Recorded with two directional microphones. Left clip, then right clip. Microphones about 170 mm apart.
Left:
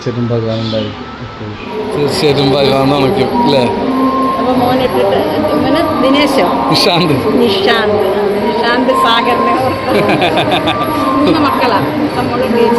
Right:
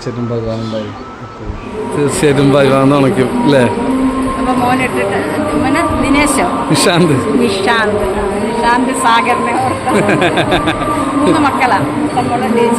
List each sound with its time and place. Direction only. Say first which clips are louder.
2.2 s speech: right 1 dB; 40° right (ahead or behind)
6.8 s speech: right 3 dB; 45° right (ahead or behind)
10.1 s speech: left 1 dB; 30° right (ahead or behind)